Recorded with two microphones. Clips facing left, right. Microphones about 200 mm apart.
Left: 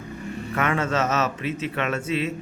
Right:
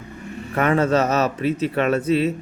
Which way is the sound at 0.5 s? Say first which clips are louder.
Right 6 dB; 35° right (ahead or behind).